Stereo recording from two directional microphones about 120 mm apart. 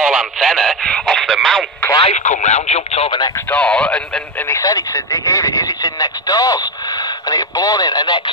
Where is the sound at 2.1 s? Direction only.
80° left; by 3.1 s 60° left (ahead or behind).